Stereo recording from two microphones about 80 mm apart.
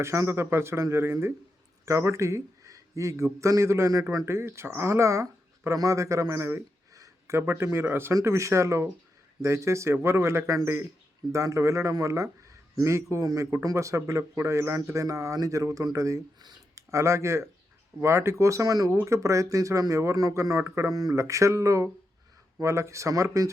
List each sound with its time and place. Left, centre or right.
0.0 s a man's voice: right
19.0 s speech: right